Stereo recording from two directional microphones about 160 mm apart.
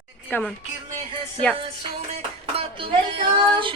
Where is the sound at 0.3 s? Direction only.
10° left (ahead or behind).